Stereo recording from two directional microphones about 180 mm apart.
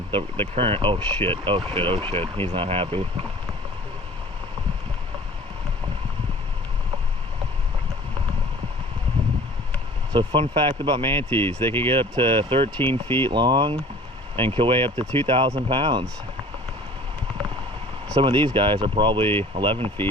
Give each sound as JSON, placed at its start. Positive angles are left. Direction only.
{"t": 0.5, "sound": "speech", "side_deg": -30}
{"t": 10.1, "sound": "speech", "side_deg": -25}
{"t": 11.2, "sound": "speech", "side_deg": 10}
{"t": 11.9, "sound": "speech", "side_deg": -30}
{"t": 12.9, "sound": "speech", "side_deg": 15}
{"t": 13.2, "sound": "speech", "side_deg": -25}
{"t": 18.2, "sound": "speech", "side_deg": -25}
{"t": 19.2, "sound": "speech", "side_deg": 10}
{"t": 19.5, "sound": "speech", "side_deg": -30}